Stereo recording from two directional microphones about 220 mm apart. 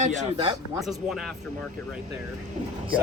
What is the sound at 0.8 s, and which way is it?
Speech, centre (ahead or behind).